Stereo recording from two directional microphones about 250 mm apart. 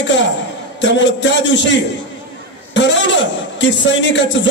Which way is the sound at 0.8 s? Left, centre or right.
Left.